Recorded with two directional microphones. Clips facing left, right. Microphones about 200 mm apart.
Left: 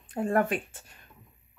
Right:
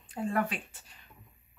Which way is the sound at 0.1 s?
50° left (ahead or behind).